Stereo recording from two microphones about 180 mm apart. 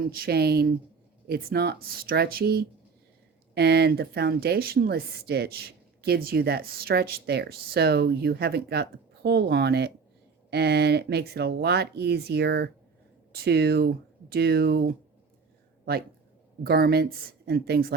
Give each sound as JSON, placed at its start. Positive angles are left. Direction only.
{"t": 0.1, "sound": "speech", "side_deg": -60}
{"t": 16.6, "sound": "speech", "side_deg": -60}